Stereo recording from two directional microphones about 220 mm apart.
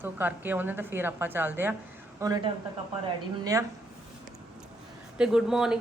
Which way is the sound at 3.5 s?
15° right (ahead or behind).